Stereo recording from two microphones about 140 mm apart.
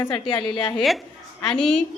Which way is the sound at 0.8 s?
Centre (ahead or behind).